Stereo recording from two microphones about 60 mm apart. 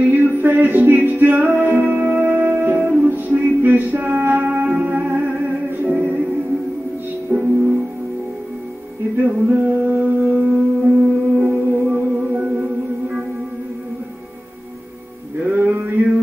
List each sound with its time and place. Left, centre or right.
0.0 s music: right
7.3 s music: right
9.1 s music: right
9.6 s music: right
15.4 s a sound: right